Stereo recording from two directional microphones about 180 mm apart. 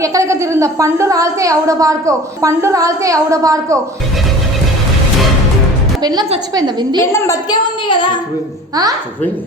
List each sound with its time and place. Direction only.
0.0 s a woman's voice: 15° right (ahead or behind)
6.0 s a woman's voice: 20° right (ahead or behind)
7.0 s a woman's voice: 15° left (ahead or behind)
8.7 s a woman's voice: 20° right (ahead or behind)